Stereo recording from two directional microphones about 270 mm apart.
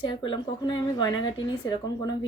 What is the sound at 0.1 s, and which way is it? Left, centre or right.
Speech, centre.